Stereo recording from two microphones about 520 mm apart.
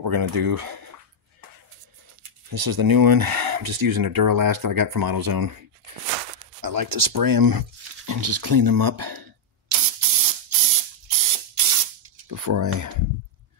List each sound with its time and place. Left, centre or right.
0.0 s speech: right
2.5 s speech: right
6.6 s a sound: right
12.3 s speech: right